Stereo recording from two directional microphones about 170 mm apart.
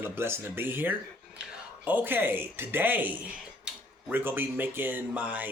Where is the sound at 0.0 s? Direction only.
15° right (ahead or behind).